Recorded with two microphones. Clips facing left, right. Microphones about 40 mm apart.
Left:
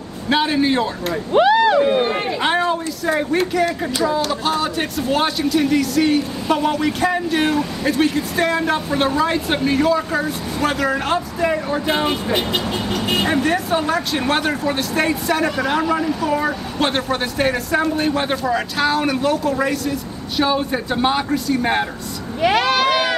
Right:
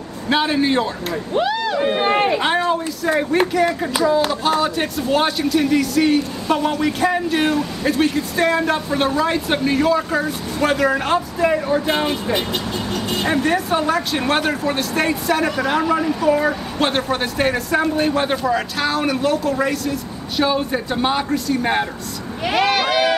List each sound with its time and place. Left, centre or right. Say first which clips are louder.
0.3 s speech: even; centre
2.0 s speech: right 2 dB; right
2.4 s speech: even; centre
13.2 s speech: right 2 dB; centre